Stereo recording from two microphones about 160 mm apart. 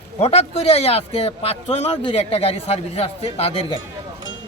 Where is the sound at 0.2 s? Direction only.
40° left (ahead or behind).